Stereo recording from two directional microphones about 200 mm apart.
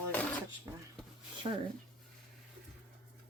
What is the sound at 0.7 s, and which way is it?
Speech, 10° right (ahead or behind).